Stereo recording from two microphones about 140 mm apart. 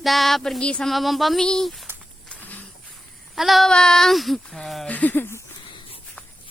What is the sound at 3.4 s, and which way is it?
Speech, centre (ahead or behind).